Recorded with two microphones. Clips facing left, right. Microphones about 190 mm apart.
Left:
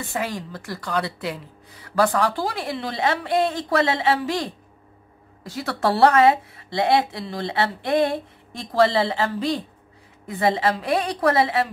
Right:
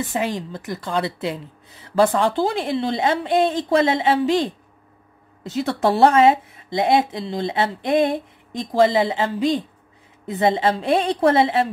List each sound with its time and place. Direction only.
0.0 s speech: 20° right (ahead or behind)